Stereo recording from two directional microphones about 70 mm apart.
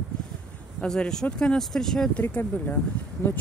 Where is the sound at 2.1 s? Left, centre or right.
Left.